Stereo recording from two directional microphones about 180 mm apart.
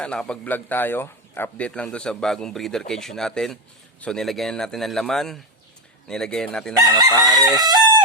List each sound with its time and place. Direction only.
0.0 s a man's voice: 5° left (ahead or behind)
6.7 s crowing: 20° right (ahead or behind)